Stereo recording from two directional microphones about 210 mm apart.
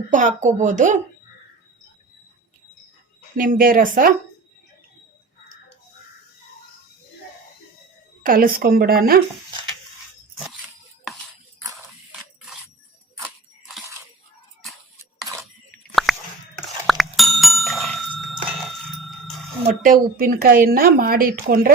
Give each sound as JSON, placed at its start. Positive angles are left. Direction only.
{"t": 0.1, "sound": "speech", "side_deg": -35}
{"t": 3.3, "sound": "speech", "side_deg": -40}
{"t": 8.2, "sound": "a woman's voice", "side_deg": -45}
{"t": 16.1, "sound": "chewing", "side_deg": 0}
{"t": 16.8, "sound": "bicycle bell", "side_deg": 0}
{"t": 19.6, "sound": "a woman's voice", "side_deg": -40}